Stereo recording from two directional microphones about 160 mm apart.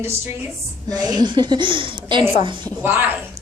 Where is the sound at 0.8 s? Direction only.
25° right (ahead or behind).